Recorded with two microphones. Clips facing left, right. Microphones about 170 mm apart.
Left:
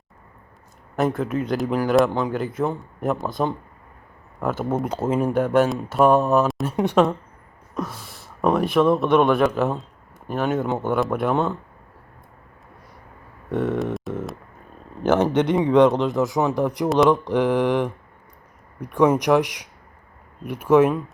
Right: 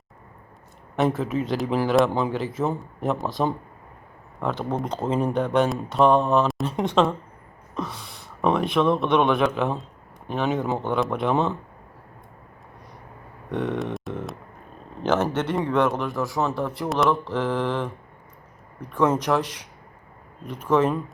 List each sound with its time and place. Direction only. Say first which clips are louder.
0.9 s speech: left 1 dB; centre (ahead or behind)
13.5 s speech: left 3 dB; 5° left (ahead or behind)
13.9 s music: left 3 dB; centre (ahead or behind)
15.0 s speech: left 4 dB; 15° left (ahead or behind)